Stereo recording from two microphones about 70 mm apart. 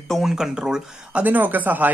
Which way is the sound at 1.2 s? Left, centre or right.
Right.